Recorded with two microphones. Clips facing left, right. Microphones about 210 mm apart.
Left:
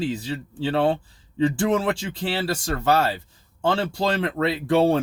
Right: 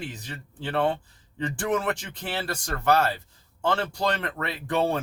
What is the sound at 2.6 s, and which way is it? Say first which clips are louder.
Speech: left 1 dB; 30° left (ahead or behind).